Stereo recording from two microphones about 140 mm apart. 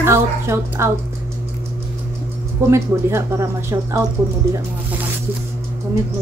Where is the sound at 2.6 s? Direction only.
20° right (ahead or behind).